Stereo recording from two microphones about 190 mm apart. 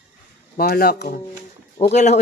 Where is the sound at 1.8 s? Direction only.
35° left (ahead or behind).